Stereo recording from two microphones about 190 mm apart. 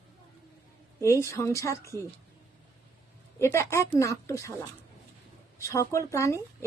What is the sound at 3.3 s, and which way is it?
Speech, 15° left (ahead or behind).